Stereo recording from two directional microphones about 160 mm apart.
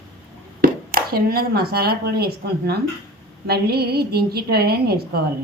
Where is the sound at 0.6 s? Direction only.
65° right (ahead or behind).